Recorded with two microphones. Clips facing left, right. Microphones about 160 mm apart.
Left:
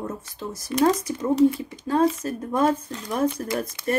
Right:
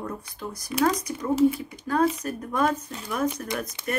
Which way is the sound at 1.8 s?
25° left (ahead or behind).